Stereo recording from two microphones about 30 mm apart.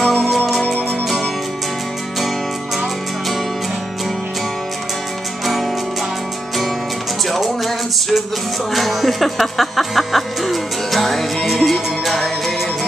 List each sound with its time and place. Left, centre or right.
0.0 s music: centre
5.4 s music: centre
7.2 s music: centre